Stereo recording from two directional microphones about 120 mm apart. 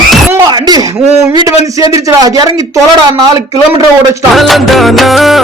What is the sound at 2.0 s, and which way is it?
Speech, 30° right (ahead or behind).